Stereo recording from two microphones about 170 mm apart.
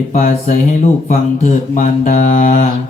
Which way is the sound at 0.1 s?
50° left (ahead or behind).